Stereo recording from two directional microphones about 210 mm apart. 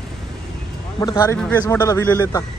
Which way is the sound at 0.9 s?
20° left (ahead or behind).